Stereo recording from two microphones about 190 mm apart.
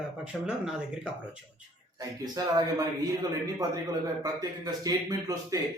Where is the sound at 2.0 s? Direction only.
20° right (ahead or behind).